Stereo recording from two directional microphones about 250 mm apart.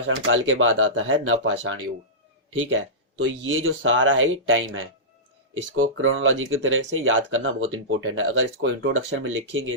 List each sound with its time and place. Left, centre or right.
0.1 s speech: right